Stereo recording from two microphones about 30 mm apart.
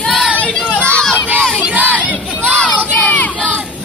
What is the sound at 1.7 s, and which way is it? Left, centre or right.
Battle cry, right.